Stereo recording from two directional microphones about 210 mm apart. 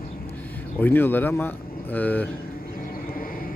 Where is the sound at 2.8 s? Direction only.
45° left (ahead or behind).